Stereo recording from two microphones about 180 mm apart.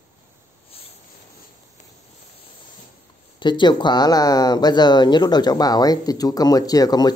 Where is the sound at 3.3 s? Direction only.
25° left (ahead or behind).